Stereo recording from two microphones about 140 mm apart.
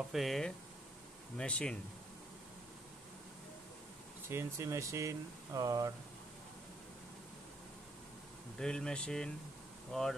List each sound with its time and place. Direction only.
0.1 s speech: centre (ahead or behind)
4.3 s speech: 20° right (ahead or behind)
8.5 s speech: 5° left (ahead or behind)